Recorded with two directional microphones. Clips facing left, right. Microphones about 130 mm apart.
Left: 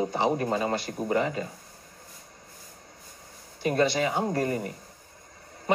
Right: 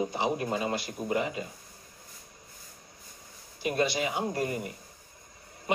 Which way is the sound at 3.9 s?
40° left (ahead or behind).